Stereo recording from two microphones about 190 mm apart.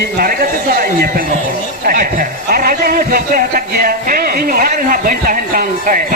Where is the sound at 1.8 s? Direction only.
45° right (ahead or behind).